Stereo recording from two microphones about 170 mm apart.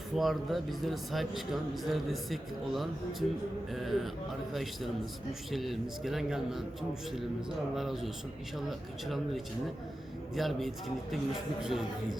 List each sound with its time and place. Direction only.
0.2 s a man's voice: centre (ahead or behind)
7.8 s a man's voice: centre (ahead or behind)